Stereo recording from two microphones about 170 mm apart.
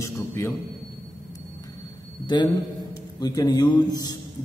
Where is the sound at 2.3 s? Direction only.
25° left (ahead or behind).